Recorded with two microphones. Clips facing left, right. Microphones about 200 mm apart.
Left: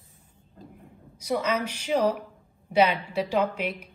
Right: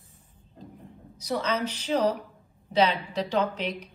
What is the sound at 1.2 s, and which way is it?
A woman's voice, 10° left (ahead or behind).